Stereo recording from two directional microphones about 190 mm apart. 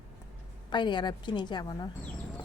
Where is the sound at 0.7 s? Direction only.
25° left (ahead or behind).